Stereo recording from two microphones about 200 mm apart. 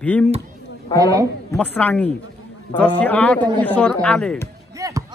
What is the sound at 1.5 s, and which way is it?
Speech, 5° left (ahead or behind).